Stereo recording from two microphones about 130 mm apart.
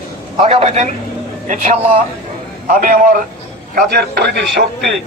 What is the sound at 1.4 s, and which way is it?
Speech, 70° right (ahead or behind).